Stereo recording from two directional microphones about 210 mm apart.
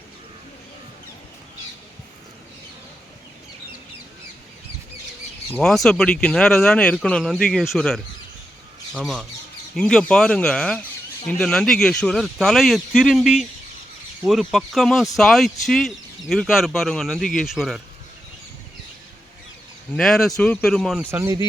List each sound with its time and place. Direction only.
5.5 s speech: centre (ahead or behind)
20.0 s speech: centre (ahead or behind)
21.1 s speech: 15° right (ahead or behind)